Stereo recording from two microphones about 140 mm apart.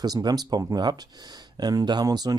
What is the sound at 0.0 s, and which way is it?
Speech, 30° right (ahead or behind).